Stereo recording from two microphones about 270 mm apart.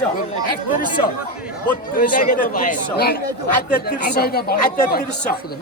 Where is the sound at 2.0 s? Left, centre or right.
Left.